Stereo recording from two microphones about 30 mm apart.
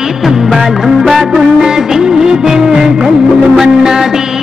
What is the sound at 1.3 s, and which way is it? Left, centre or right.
Music of bollywood, centre.